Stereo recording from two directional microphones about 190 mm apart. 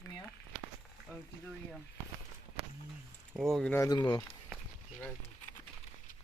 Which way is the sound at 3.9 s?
20° left (ahead or behind).